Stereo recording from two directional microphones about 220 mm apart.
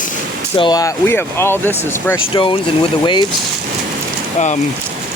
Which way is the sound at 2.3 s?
20° left (ahead or behind).